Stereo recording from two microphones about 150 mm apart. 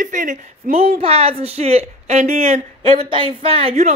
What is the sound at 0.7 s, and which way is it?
Speech, 40° right (ahead or behind).